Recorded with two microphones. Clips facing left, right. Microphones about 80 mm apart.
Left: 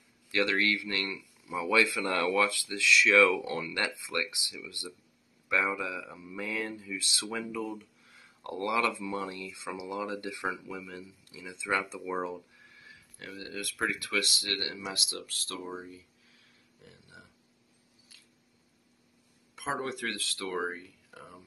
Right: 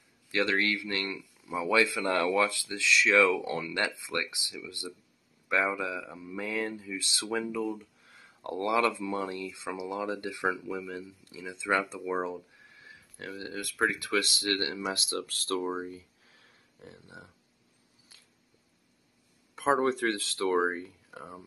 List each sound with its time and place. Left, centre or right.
0.3 s speech: right
19.5 s speech: right